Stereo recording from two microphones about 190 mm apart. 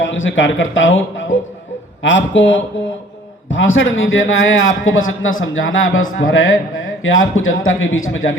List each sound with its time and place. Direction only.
0.0 s a man's voice: 90° left
2.0 s speech: 75° left (ahead or behind)
3.5 s a man's voice: 90° left